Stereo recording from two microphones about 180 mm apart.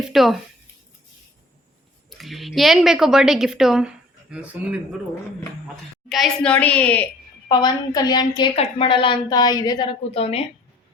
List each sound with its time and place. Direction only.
0.1 s a woman's voice: centre (ahead or behind)
2.0 s a woman's voice: centre (ahead or behind)
6.1 s a woman's voice: centre (ahead or behind)
7.4 s a woman's voice: 25° left (ahead or behind)